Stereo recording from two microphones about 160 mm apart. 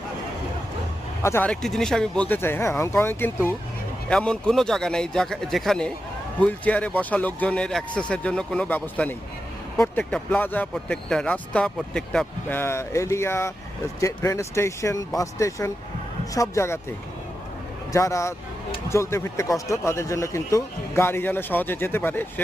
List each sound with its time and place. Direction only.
1.2 s speech: 15° left (ahead or behind)
1.5 s a man's voice: 5° left (ahead or behind)
17.9 s speech: 20° left (ahead or behind)